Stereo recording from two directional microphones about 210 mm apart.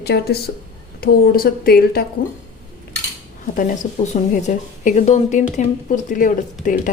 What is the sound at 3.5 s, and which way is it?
Speech, 35° left (ahead or behind).